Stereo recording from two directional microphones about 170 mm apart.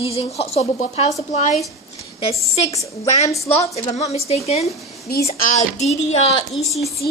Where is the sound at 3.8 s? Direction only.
40° left (ahead or behind).